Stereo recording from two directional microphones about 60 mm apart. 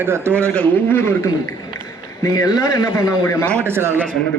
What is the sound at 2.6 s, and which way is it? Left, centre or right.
Speech, left.